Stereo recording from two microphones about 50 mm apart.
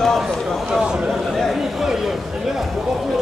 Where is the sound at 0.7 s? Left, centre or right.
Centre.